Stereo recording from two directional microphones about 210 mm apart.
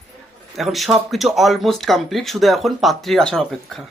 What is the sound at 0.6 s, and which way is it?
Speech, centre (ahead or behind).